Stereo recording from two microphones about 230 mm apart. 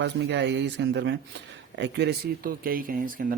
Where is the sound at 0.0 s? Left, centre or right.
Right.